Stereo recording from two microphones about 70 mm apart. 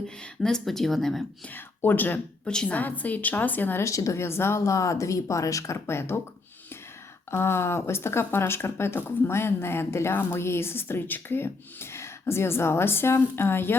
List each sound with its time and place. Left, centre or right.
0.4 s speech: centre
1.5 s a woman's voice: left
2.4 s a woman's voice: centre
3.8 s speech: left
7.3 s speech: left